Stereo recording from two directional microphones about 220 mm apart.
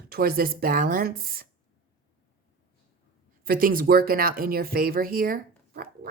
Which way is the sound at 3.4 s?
40° right (ahead or behind).